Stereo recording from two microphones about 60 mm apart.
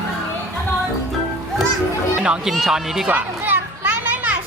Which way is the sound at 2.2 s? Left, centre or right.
Centre.